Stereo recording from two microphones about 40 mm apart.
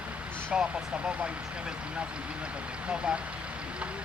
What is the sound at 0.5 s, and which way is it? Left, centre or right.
Speech, centre.